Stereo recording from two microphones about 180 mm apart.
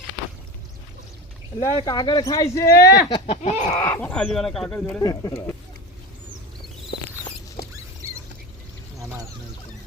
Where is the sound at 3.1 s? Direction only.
35° left (ahead or behind).